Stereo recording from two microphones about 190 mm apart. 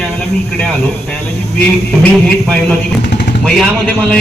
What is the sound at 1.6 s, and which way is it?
A man's voice, 5° left (ahead or behind).